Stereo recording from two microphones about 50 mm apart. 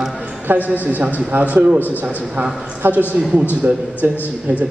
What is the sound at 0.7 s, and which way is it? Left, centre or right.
A woman's voice, right.